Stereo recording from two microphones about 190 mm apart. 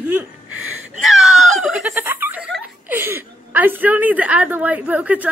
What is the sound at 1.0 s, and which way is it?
Speech, centre (ahead or behind).